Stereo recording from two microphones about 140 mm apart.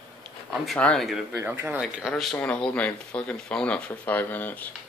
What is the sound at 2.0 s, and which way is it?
Speech, centre (ahead or behind).